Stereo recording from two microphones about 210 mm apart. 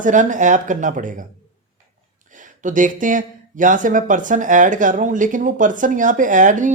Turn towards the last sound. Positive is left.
turn(degrees=-35)  # may be behind; listen again after turning